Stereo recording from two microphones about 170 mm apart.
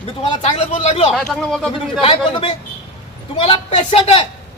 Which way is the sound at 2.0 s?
35° left (ahead or behind).